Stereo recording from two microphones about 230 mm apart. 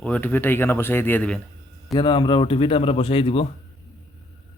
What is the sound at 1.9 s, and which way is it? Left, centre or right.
Speech, left.